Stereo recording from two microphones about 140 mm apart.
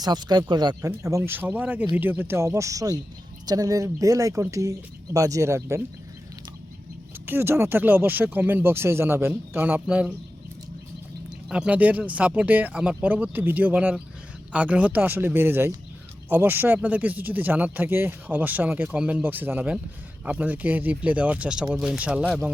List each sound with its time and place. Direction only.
0.0 s speech: 30° right (ahead or behind)
0.9 s speech: 20° right (ahead or behind)
7.3 s speech: 15° right (ahead or behind)
11.4 s speech: 5° right (ahead or behind)